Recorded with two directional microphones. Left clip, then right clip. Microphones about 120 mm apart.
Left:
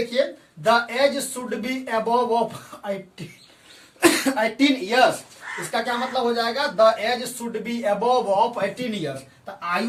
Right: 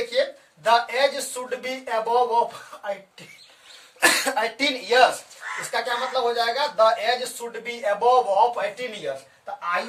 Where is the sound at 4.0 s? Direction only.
70° right (ahead or behind).